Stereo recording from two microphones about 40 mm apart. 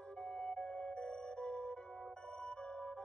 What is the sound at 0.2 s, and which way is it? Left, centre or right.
Music, left.